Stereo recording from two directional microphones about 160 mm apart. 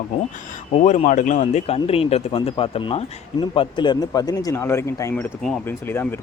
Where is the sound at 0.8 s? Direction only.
50° left (ahead or behind).